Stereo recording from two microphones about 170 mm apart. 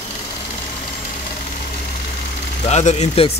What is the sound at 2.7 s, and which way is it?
Speech, 40° left (ahead or behind).